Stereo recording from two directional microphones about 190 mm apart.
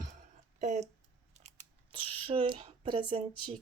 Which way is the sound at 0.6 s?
35° right (ahead or behind).